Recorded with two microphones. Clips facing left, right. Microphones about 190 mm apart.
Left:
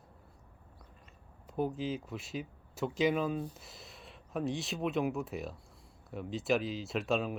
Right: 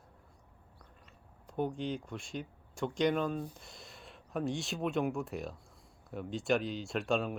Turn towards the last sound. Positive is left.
turn(degrees=0)  # may be behind; listen again after turning